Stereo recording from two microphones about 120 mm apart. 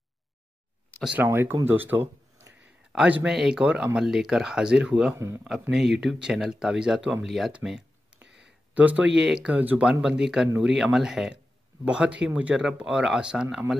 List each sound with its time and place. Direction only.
1.0 s speech: 15° right (ahead or behind)
5.1 s speech: 20° right (ahead or behind)
5.4 s speech: 5° right (ahead or behind)